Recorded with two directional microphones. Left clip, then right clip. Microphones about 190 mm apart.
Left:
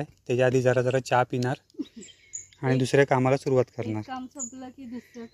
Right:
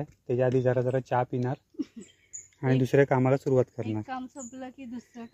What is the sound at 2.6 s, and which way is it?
Speech, 15° right (ahead or behind).